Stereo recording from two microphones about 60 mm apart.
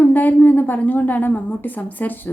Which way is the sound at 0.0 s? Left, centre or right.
Left.